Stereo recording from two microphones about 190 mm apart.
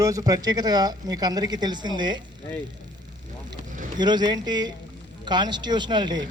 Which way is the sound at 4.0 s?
20° right (ahead or behind).